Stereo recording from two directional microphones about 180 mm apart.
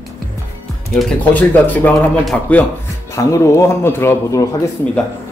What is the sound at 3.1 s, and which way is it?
Speech, 15° left (ahead or behind).